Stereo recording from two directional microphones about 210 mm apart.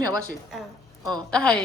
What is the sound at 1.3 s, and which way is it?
Speech, 5° left (ahead or behind).